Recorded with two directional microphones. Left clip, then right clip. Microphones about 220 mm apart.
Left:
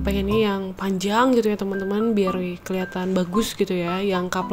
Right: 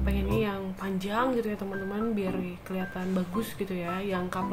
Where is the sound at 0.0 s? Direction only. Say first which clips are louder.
Left 8 dB; 40° left (ahead or behind).